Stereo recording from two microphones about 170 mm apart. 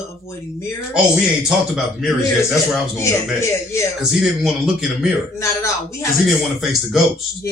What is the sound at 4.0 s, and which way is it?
A man's voice, 5° right (ahead or behind).